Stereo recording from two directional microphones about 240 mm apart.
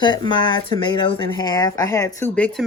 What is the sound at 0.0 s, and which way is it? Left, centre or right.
Speech, centre.